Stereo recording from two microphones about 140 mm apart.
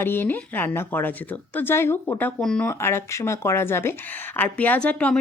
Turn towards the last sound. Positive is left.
turn(degrees=10)  # may be behind; listen again after turning